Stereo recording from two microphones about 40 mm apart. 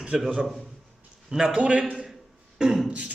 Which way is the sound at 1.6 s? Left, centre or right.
Right.